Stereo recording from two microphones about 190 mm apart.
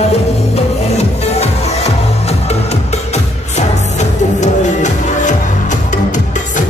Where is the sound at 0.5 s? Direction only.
35° left (ahead or behind).